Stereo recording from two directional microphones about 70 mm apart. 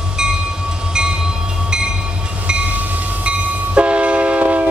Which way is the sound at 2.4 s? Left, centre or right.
Centre.